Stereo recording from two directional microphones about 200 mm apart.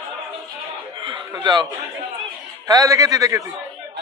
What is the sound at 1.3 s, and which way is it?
Speech, 20° right (ahead or behind).